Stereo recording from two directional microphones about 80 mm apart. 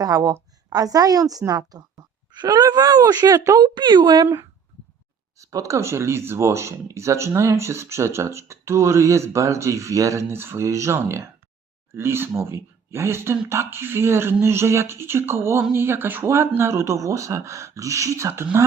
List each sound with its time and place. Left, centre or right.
0.0 s speech: right
3.6 s a woman's voice: right
5.4 s speech: right